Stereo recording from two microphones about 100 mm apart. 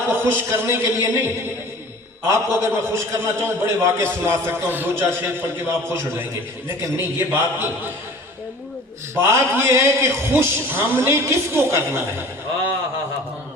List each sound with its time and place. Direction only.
0.1 s a man's voice: 20° right (ahead or behind)
9.1 s a man's voice: 25° right (ahead or behind)